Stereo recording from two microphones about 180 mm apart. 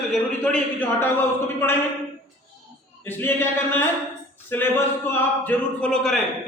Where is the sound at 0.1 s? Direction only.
5° left (ahead or behind).